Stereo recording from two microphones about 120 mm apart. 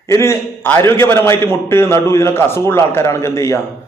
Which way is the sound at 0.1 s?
20° left (ahead or behind).